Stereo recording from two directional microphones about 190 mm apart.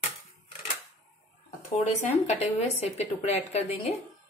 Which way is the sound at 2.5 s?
35° left (ahead or behind).